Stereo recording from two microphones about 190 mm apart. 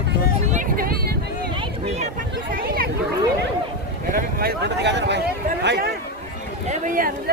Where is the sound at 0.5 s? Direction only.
50° right (ahead or behind).